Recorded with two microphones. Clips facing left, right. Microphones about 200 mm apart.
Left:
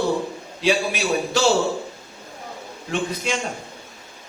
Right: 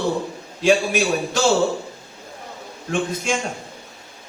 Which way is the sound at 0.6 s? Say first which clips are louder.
Right 3 dB; 50° right (ahead or behind).